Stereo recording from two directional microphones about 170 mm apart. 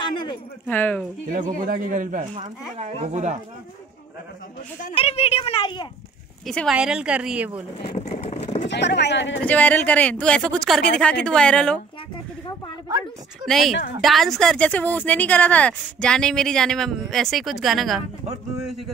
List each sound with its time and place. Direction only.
0.1 s a sound: 25° left (ahead or behind)
0.7 s speech: 10° left (ahead or behind)
1.3 s a man's voice: 50° right (ahead or behind)
2.3 s speech: 40° right (ahead or behind)
4.9 s speech: 35° left (ahead or behind)
6.4 s speech: centre (ahead or behind)
7.8 s speech: 30° left (ahead or behind)
8.6 s speech: 90° left
9.4 s speech: 10° left (ahead or behind)
13.5 s speech: centre (ahead or behind)